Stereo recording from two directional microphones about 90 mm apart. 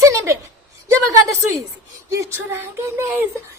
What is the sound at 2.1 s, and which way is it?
Speech, 30° right (ahead or behind).